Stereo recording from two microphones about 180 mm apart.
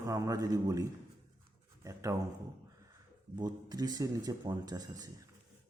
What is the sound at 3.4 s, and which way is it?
Speech, 20° right (ahead or behind).